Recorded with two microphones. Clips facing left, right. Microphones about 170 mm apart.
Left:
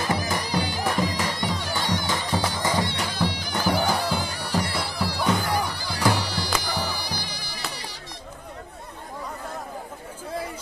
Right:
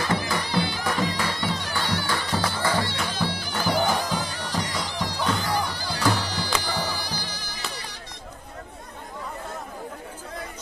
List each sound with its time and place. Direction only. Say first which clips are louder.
0.5 s music: even; 15° left (ahead or behind)